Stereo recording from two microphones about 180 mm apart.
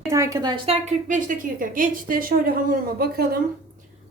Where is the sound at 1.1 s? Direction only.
45° right (ahead or behind).